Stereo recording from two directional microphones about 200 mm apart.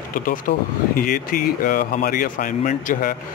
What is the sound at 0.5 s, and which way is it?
Speech, 45° left (ahead or behind).